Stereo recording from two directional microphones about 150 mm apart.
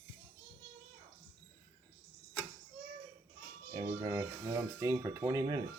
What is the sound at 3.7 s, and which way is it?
Speech, 30° right (ahead or behind).